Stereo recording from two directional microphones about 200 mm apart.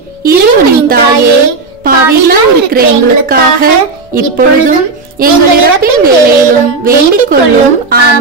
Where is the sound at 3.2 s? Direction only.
45° right (ahead or behind).